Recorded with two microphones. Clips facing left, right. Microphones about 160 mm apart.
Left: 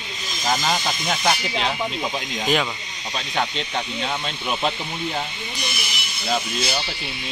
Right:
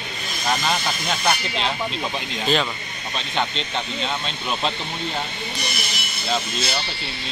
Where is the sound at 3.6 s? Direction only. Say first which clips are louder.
Even; 10° left (ahead or behind).